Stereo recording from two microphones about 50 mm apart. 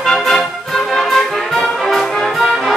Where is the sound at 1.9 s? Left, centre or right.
Centre.